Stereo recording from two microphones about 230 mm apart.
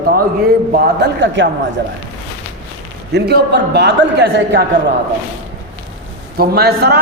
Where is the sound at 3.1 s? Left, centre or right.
Right.